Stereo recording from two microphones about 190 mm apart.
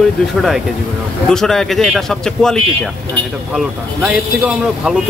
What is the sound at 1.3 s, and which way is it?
Speech, centre (ahead or behind).